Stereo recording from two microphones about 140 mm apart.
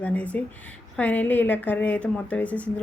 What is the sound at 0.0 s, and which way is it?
A woman's voice, 10° left (ahead or behind).